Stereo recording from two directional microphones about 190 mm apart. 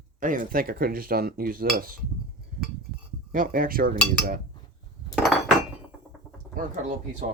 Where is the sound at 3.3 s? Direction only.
50° right (ahead or behind).